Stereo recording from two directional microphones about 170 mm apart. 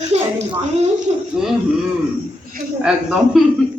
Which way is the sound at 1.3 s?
5° right (ahead or behind).